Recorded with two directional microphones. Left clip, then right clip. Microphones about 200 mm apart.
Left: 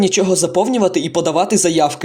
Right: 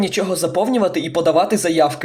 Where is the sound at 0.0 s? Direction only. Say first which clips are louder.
Left 4 dB; 35° left (ahead or behind).